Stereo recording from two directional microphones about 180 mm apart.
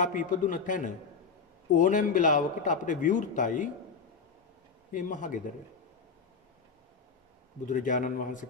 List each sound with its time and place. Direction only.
0.0 s a man's voice: 45° left (ahead or behind)
4.9 s a man's voice: 45° left (ahead or behind)
7.6 s a man's voice: 45° left (ahead or behind)